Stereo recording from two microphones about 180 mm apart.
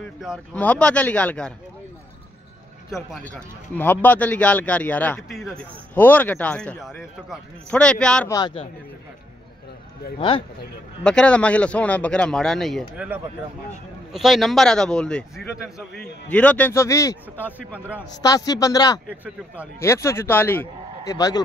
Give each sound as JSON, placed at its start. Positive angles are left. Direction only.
{"t": 0.5, "sound": "a man's voice", "side_deg": 5}
{"t": 2.9, "sound": "a man's voice", "side_deg": 5}
{"t": 8.3, "sound": "a man's voice", "side_deg": 20}
{"t": 10.1, "sound": "speech", "side_deg": 30}
{"t": 11.1, "sound": "a man's voice", "side_deg": 5}
{"t": 17.7, "sound": "a man's voice", "side_deg": -10}
{"t": 18.2, "sound": "a man's voice", "side_deg": 20}